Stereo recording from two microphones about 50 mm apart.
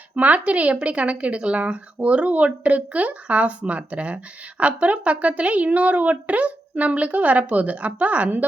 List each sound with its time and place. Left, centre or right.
0.2 s a woman's voice: right